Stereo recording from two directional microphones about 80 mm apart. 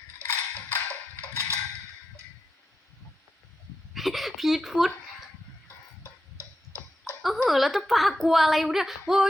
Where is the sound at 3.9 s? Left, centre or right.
Centre.